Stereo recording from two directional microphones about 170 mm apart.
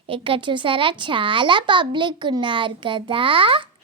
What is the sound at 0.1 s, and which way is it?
A child's voice, 30° right (ahead or behind).